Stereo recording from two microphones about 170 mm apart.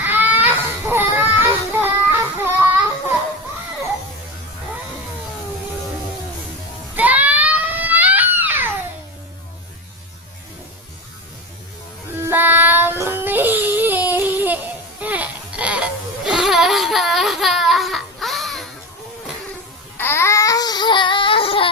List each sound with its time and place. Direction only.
0.0 s baby cry: 10° right (ahead or behind)
1.8 s child singing: 10° right (ahead or behind)
6.9 s baby cry: 10° right (ahead or behind)
12.1 s a sound: 10° right (ahead or behind)
15.0 s baby cry: 10° right (ahead or behind)
20.0 s baby cry: 15° left (ahead or behind); by 21.7 s 30° left (ahead or behind)